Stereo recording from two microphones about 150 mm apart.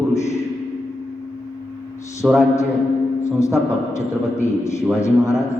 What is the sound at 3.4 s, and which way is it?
A man's voice, 20° left (ahead or behind).